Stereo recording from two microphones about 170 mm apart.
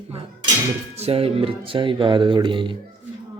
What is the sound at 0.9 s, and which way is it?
Speech, 35° right (ahead or behind).